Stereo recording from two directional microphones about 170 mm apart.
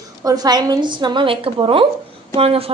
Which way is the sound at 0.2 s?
20° right (ahead or behind).